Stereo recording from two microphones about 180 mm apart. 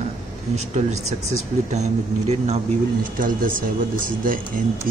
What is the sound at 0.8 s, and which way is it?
Speech, 45° right (ahead or behind).